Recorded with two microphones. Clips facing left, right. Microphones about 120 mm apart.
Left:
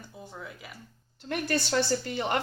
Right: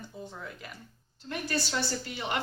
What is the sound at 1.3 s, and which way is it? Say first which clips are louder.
A woman's voice: left 4 dB; 55° left (ahead or behind).